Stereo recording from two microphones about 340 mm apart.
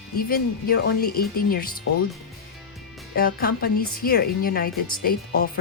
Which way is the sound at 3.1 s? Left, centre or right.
Left.